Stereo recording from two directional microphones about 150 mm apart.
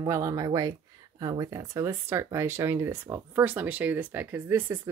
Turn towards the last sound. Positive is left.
turn(degrees=-15)  # may be behind; listen again after turning